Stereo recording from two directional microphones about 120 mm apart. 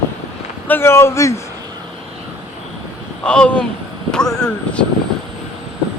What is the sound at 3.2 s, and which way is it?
Speech, 10° left (ahead or behind).